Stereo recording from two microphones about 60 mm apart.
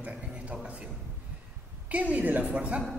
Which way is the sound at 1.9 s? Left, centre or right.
Right.